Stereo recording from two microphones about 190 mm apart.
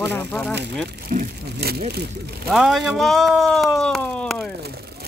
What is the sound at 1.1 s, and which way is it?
Vehicle, 55° right (ahead or behind).